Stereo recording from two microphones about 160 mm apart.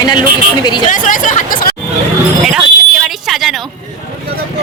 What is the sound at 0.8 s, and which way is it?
Speech, 55° left (ahead or behind).